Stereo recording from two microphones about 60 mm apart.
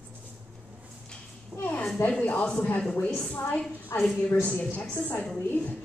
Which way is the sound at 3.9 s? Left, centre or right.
Left.